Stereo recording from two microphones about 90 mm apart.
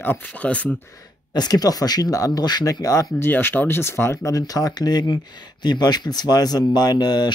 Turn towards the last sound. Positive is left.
turn(degrees=50)  # may be behind; listen again after turning